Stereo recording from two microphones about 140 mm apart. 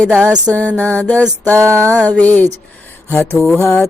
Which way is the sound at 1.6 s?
20° right (ahead or behind).